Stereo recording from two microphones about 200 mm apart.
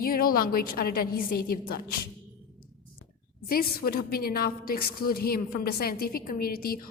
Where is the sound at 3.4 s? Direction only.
50° left (ahead or behind).